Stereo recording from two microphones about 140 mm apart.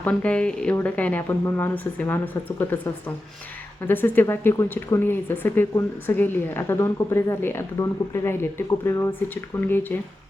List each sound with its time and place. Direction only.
0.0 s speech: 10° left (ahead or behind)